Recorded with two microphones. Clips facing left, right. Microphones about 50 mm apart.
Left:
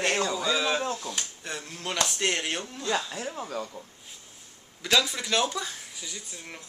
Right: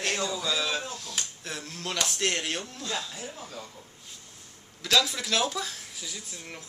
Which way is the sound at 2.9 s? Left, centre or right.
Left.